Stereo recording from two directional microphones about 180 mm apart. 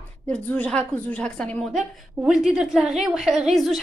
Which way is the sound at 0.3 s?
10° left (ahead or behind).